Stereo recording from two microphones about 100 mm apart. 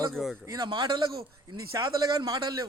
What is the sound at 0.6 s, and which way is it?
Speech, 50° right (ahead or behind).